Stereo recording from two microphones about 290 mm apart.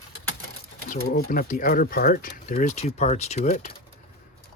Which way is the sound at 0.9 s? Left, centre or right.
Left.